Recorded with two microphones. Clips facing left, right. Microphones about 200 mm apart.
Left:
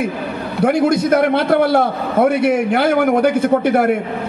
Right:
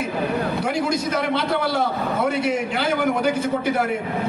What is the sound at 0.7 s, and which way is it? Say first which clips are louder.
A man's voice: left 9 dB; 60° left (ahead or behind).